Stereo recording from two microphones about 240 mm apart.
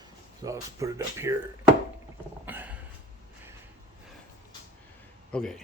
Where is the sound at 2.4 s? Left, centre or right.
Centre.